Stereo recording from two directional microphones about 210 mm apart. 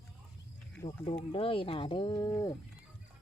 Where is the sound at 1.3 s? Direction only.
25° left (ahead or behind).